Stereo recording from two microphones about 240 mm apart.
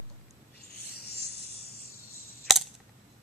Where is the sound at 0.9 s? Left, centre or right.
Left.